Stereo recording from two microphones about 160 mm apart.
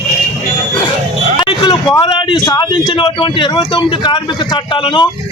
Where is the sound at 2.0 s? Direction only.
30° left (ahead or behind).